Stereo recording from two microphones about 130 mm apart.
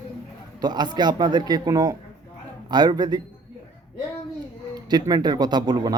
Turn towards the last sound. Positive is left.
turn(degrees=-30)  # may be behind; listen again after turning